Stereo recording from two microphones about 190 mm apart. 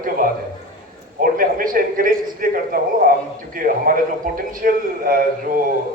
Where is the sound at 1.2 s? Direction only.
45° right (ahead or behind).